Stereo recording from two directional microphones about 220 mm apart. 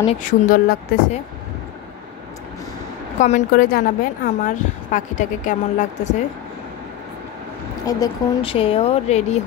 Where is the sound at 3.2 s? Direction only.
35° left (ahead or behind).